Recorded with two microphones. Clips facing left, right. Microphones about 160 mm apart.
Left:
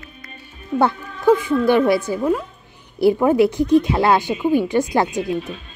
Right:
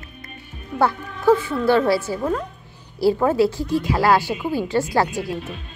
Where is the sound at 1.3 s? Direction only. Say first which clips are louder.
Left 2 dB; 15° left (ahead or behind).